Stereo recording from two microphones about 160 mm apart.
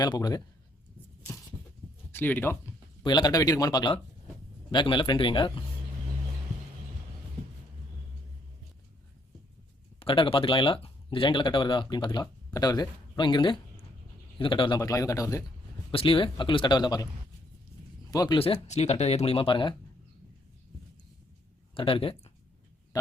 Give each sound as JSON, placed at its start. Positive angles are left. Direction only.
{"t": 0.0, "sound": "a man's voice", "side_deg": 25}
{"t": 2.1, "sound": "speech", "side_deg": 10}
{"t": 3.0, "sound": "a man's voice", "side_deg": 30}
{"t": 10.0, "sound": "a man's voice", "side_deg": 35}
{"t": 15.9, "sound": "speech", "side_deg": 35}
{"t": 18.1, "sound": "speech", "side_deg": 20}
{"t": 18.3, "sound": "speech", "side_deg": 35}
{"t": 21.8, "sound": "speech", "side_deg": 35}